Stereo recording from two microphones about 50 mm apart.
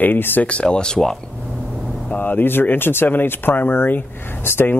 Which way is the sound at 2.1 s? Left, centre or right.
Left.